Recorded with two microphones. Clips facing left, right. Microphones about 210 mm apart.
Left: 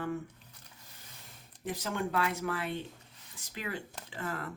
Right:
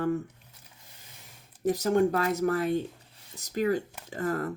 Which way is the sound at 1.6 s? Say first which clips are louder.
Right 11 dB; 40° right (ahead or behind).